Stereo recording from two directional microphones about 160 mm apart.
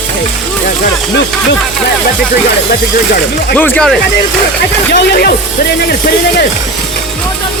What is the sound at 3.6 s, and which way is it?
Speech, 10° left (ahead or behind).